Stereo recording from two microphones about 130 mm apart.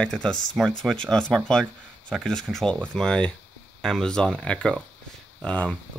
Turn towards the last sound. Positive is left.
turn(degrees=5)  # may be behind; listen again after turning